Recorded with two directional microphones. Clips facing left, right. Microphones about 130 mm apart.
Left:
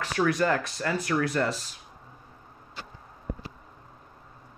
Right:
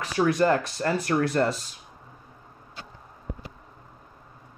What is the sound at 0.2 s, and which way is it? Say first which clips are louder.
Speech: right 3 dB; 30° right (ahead or behind).